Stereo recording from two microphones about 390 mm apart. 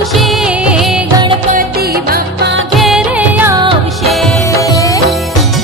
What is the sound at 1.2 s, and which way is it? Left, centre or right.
Music, right.